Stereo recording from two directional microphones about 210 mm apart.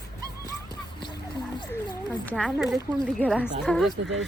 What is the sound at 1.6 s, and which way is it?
Speech, 20° left (ahead or behind).